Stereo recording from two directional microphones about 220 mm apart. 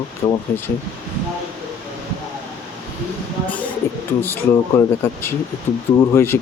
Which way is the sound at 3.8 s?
10° left (ahead or behind).